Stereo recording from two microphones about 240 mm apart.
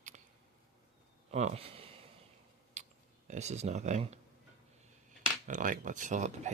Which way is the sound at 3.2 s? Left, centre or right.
Right.